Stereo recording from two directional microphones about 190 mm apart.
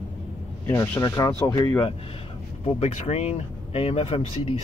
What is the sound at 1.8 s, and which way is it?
Speech, 30° left (ahead or behind).